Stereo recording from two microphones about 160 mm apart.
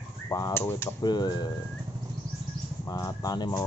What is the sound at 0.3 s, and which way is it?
Speech, 20° left (ahead or behind).